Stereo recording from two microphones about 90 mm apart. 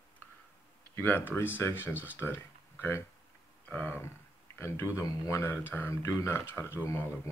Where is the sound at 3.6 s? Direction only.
15° left (ahead or behind).